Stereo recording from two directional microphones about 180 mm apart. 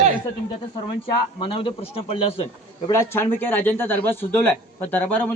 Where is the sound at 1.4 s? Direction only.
30° left (ahead or behind).